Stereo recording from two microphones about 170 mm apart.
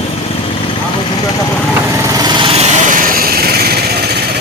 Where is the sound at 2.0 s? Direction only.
25° right (ahead or behind); by 3.8 s 65° right (ahead or behind).